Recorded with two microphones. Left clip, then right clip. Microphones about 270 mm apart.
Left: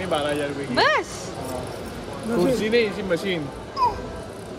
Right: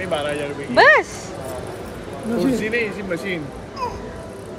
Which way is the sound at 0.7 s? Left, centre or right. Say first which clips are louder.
Right 8 dB; centre.